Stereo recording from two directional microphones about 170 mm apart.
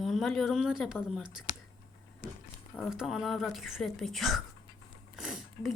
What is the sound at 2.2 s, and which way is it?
Speech, 60° left (ahead or behind).